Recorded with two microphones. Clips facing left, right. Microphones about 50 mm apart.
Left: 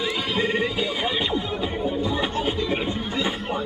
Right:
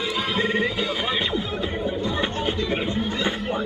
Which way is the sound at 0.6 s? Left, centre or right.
Centre.